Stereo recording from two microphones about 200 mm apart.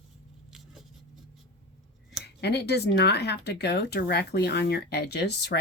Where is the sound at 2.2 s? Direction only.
55° left (ahead or behind).